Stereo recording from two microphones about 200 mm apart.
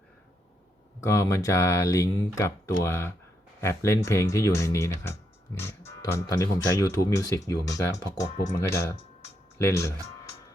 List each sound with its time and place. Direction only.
1.0 s speech: 15° left (ahead or behind)